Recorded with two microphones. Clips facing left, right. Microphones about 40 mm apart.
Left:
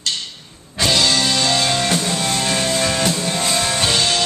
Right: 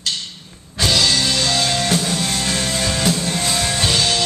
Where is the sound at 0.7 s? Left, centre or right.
Centre.